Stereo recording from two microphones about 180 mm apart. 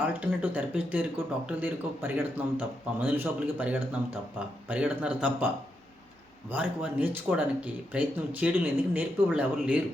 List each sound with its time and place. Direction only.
0.0 s speech: 10° right (ahead or behind)
6.5 s speech: 10° right (ahead or behind)